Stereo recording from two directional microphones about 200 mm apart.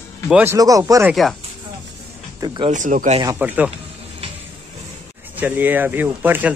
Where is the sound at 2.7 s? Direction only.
40° right (ahead or behind).